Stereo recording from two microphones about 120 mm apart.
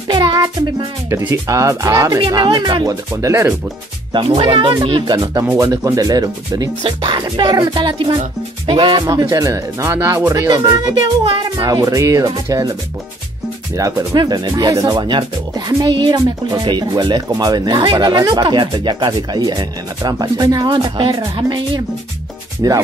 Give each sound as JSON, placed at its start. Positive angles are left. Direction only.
{"t": 0.1, "sound": "music", "side_deg": -45}
{"t": 1.1, "sound": "speech", "side_deg": -25}
{"t": 2.3, "sound": "speech", "side_deg": -35}
{"t": 4.1, "sound": "speech", "side_deg": -45}
{"t": 5.4, "sound": "speech", "side_deg": -15}
{"t": 5.7, "sound": "speech", "side_deg": -30}
{"t": 6.8, "sound": "speech", "side_deg": -45}
{"t": 13.7, "sound": "speech", "side_deg": -30}